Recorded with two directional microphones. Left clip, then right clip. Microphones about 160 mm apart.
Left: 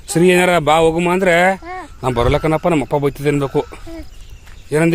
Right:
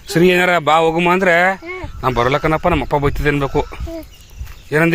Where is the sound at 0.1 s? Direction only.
10° left (ahead or behind).